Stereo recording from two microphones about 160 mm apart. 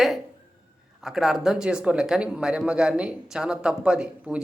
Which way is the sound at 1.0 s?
Centre (ahead or behind).